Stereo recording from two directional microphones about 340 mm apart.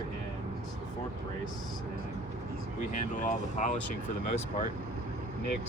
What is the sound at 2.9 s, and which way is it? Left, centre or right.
Speech, left.